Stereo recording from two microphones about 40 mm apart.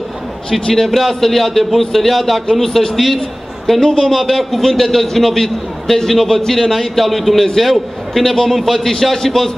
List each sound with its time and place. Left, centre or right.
0.5 s a man's voice: centre
0.8 s a man's voice: centre
4.0 s a man's voice: centre